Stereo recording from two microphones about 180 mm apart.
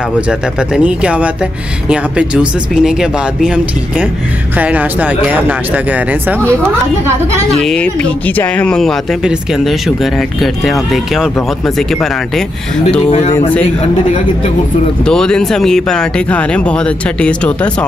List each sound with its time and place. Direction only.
0.3 s speech: 5° right (ahead or behind)
7.6 s speech: 5° left (ahead or behind)
13.1 s speech: 35° left (ahead or behind)
15.0 s speech: 5° left (ahead or behind)